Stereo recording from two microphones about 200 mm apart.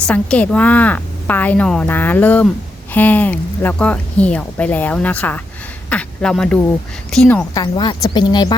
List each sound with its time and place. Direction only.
0.1 s a woman's voice: 5° left (ahead or behind)
7.5 s speech: 20° left (ahead or behind)